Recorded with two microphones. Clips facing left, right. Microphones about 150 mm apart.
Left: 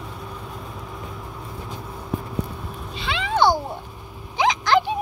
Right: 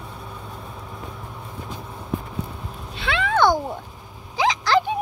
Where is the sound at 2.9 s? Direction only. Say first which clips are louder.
Right 2 dB; 60° right (ahead or behind).